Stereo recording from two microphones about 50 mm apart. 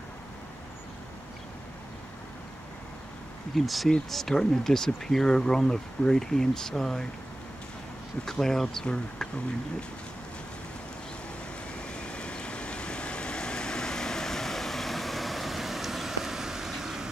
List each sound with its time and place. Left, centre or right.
3.5 s speech: centre
8.3 s speech: centre
11.9 s vehicle: left; by 17.1 s centre